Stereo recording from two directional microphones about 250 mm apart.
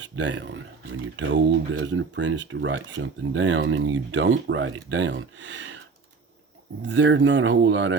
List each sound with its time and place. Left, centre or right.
0.0 s speech: right
6.8 s speech: right